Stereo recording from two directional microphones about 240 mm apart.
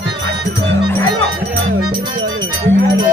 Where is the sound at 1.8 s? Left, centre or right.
Centre.